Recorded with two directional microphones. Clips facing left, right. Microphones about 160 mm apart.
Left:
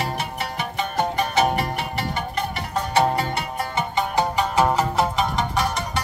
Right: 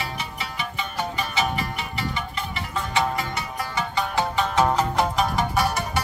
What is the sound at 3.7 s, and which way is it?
Music, 20° left (ahead or behind).